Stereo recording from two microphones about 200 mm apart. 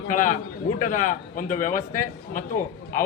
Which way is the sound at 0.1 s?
40° left (ahead or behind).